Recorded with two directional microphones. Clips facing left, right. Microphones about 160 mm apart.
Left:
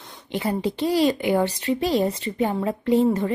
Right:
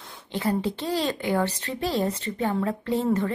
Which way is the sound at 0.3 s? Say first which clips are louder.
Left 1 dB; 15° left (ahead or behind).